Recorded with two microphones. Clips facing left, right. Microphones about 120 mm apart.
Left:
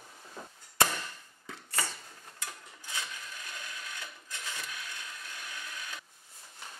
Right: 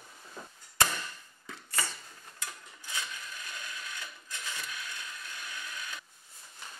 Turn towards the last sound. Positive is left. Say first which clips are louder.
# right 1 dB
turn(degrees=45)  # may be behind; listen again after turning